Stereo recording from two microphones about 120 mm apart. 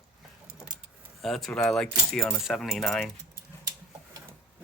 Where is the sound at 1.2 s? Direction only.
Centre (ahead or behind).